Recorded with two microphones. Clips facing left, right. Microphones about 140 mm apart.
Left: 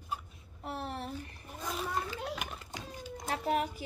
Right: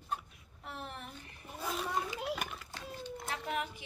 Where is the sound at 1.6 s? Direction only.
Centre (ahead or behind).